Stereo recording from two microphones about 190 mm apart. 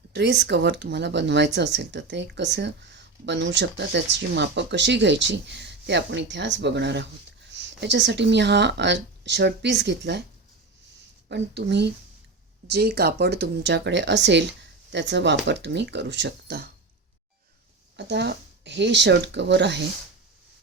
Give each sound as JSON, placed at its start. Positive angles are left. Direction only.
{"t": 0.1, "sound": "speech", "side_deg": -65}
{"t": 11.3, "sound": "speech", "side_deg": -65}
{"t": 17.9, "sound": "speech", "side_deg": -65}